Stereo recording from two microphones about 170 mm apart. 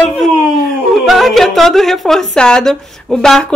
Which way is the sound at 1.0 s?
Centre (ahead or behind).